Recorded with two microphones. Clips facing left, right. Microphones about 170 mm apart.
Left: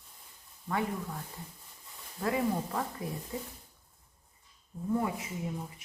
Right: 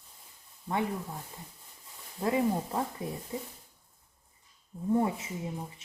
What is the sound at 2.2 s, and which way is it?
Speech, 20° right (ahead or behind).